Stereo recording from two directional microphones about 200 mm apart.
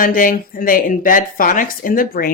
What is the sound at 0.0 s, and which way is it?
Speech, 45° left (ahead or behind).